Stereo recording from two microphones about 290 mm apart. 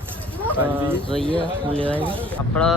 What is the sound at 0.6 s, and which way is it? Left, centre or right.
Speech, centre.